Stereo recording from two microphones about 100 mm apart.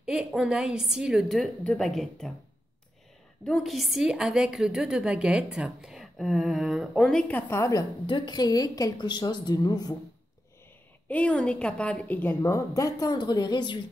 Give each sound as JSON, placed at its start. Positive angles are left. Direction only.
{"t": 0.0, "sound": "a woman's voice", "side_deg": -5}
{"t": 1.4, "sound": "a woman's voice", "side_deg": 5}
{"t": 3.4, "sound": "a woman's voice", "side_deg": 0}
{"t": 7.1, "sound": "a woman's voice", "side_deg": 5}
{"t": 7.3, "sound": "a woman's voice", "side_deg": 20}
{"t": 8.1, "sound": "a woman's voice", "side_deg": 45}
{"t": 11.1, "sound": "a woman's voice", "side_deg": 15}
{"t": 12.4, "sound": "speech", "side_deg": 30}